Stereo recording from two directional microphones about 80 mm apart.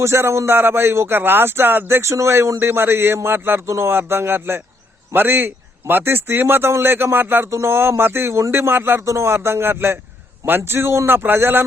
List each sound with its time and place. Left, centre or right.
0.0 s speech: right